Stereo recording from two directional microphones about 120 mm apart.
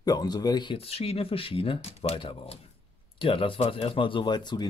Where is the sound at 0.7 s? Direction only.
55° left (ahead or behind); by 4.6 s 40° left (ahead or behind).